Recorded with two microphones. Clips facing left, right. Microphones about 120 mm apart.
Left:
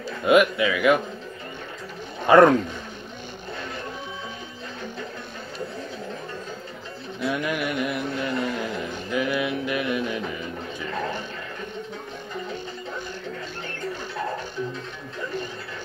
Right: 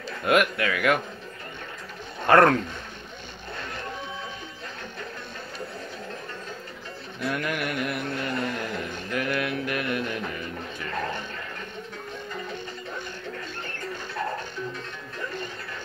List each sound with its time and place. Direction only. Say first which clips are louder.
0.2 s speech: left 4 dB; 5° left (ahead or behind)
2.2 s speech: left 3 dB; 10° left (ahead or behind)
7.2 s a sound: left 3 dB; 10° left (ahead or behind)